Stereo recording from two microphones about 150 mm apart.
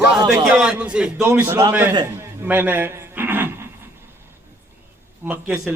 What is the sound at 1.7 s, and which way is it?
A man's voice, 10° right (ahead or behind).